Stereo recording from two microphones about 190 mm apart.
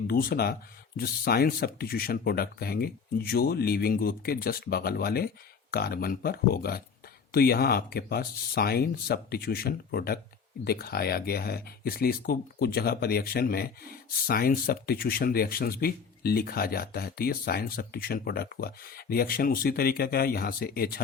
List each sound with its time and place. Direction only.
0.1 s speech: 55° left (ahead or behind)